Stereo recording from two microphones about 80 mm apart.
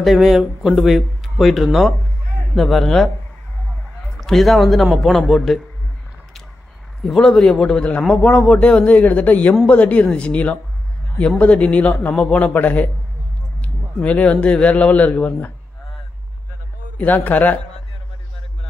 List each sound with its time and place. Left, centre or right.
0.0 s speech: centre
4.2 s speech: centre
7.0 s a man's voice: centre
16.9 s a man's voice: centre